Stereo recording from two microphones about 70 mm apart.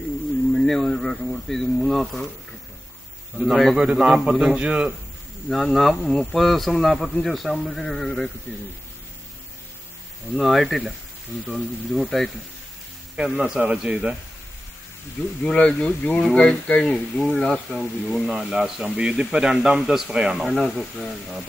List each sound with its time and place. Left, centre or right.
0.6 s speech: centre
3.4 s speech: centre
3.7 s speech: centre
5.5 s speech: centre
10.3 s speech: centre
13.1 s speech: centre
15.4 s speech: centre
20.4 s speech: centre